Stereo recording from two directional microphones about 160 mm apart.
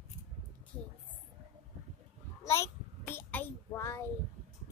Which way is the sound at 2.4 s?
15° left (ahead or behind).